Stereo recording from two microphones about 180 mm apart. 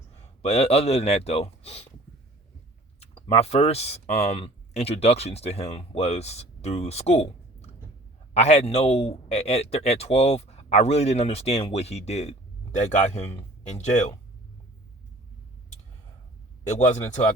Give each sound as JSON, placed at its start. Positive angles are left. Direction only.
{"t": 0.4, "sound": "speech", "side_deg": 35}
{"t": 3.0, "sound": "speech", "side_deg": 35}
{"t": 8.3, "sound": "speech", "side_deg": 35}
{"t": 16.7, "sound": "speech", "side_deg": 40}